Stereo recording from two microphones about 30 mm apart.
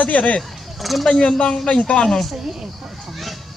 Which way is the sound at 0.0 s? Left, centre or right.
Left.